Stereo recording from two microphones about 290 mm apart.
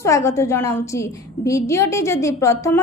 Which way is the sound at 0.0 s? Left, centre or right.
Centre.